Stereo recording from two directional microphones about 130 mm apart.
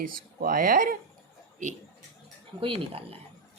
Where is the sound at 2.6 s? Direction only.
45° right (ahead or behind).